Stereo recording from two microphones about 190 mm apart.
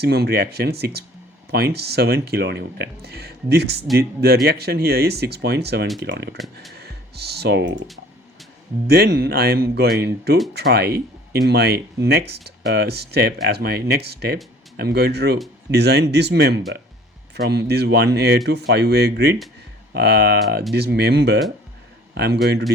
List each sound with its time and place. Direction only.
0.0 s speech: 55° right (ahead or behind)
6.4 s speech: centre (ahead or behind)
6.7 s speech: 60° right (ahead or behind)
8.9 s a man's voice: 55° right (ahead or behind)